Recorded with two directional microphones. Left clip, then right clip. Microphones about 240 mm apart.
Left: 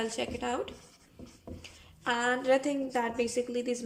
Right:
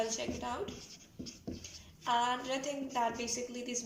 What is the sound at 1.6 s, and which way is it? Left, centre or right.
A woman's voice, left.